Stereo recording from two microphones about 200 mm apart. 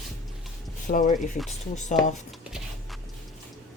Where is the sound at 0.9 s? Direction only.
40° left (ahead or behind).